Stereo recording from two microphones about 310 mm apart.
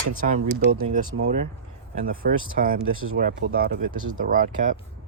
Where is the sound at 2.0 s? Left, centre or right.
Right.